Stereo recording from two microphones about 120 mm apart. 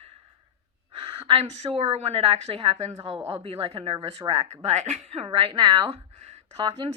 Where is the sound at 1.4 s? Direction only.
70° right (ahead or behind); by 5.9 s 40° right (ahead or behind).